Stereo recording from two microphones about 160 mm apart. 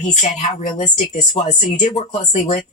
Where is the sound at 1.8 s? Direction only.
50° left (ahead or behind).